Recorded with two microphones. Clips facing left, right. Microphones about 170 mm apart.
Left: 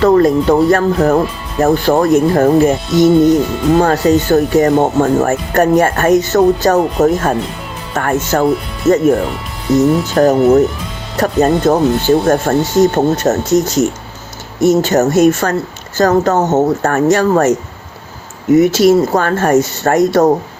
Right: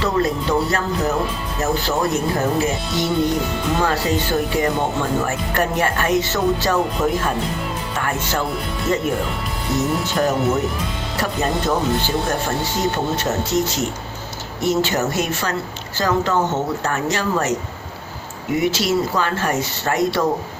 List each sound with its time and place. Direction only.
0.0 s speech: 50° left (ahead or behind)
8.9 s speech: 25° left (ahead or behind)
10.2 s speech: 45° left (ahead or behind)
18.5 s speech: 45° left (ahead or behind)